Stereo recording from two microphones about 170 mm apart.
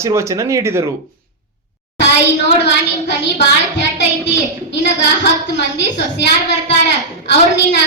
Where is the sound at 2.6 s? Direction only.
90° left.